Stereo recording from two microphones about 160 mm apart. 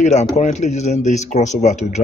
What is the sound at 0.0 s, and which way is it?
Speech, 45° left (ahead or behind).